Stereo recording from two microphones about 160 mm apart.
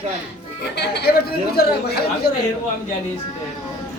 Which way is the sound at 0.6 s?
90° left.